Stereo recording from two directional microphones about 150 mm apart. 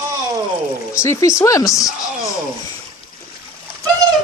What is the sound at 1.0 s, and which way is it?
Speech, 20° left (ahead or behind).